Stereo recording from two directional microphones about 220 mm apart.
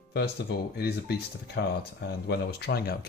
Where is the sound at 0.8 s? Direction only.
45° left (ahead or behind).